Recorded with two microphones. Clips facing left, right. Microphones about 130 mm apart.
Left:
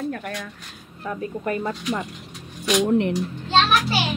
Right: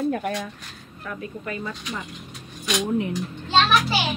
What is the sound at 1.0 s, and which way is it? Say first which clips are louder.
Speech: left 6 dB; 35° left (ahead or behind).